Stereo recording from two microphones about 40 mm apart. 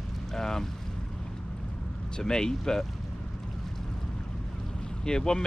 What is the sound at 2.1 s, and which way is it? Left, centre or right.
Speech, centre.